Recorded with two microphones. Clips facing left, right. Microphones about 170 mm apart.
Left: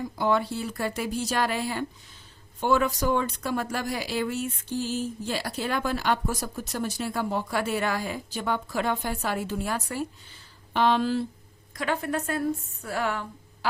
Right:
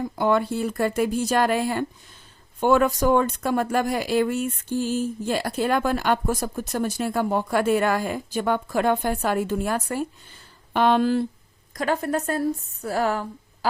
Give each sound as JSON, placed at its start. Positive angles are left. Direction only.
{"t": 0.0, "sound": "speech", "side_deg": -55}
{"t": 11.7, "sound": "a woman's voice", "side_deg": -40}